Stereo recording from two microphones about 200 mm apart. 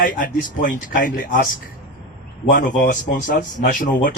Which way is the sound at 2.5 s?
45° left (ahead or behind).